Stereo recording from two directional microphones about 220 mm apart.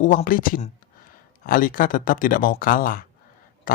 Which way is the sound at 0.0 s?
35° left (ahead or behind).